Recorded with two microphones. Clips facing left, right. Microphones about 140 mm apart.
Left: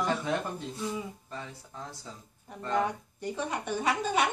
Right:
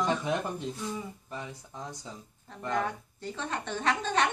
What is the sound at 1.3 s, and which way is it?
Speech, 15° right (ahead or behind).